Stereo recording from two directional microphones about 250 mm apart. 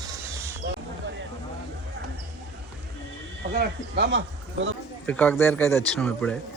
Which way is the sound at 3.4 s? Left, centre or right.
Right.